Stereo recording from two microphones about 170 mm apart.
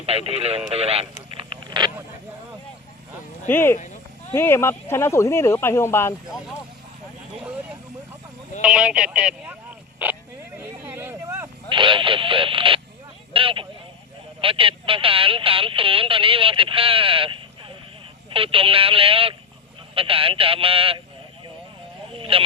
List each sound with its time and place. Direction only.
0.0 s speech: 35° right (ahead or behind)
1.4 s a sound: 30° right (ahead or behind)
3.4 s speech: 15° left (ahead or behind)
3.8 s a sound: 45° left (ahead or behind)
4.4 s speech: 15° left (ahead or behind)
8.6 s speech: 5° right (ahead or behind)
10.6 s a sound: 10° right (ahead or behind)
11.7 s speech: 30° right (ahead or behind)
22.1 s speech: 35° right (ahead or behind)